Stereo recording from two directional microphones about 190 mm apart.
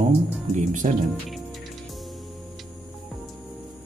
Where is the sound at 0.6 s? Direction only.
40° right (ahead or behind).